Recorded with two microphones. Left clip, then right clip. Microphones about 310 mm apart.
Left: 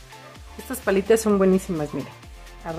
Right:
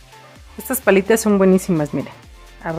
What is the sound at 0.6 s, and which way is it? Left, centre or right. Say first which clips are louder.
Speech: right 6 dB; centre.